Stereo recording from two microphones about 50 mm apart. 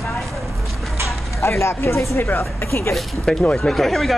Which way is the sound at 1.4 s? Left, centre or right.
Left.